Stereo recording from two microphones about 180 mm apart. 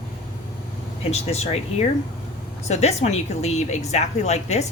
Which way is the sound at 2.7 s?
35° left (ahead or behind).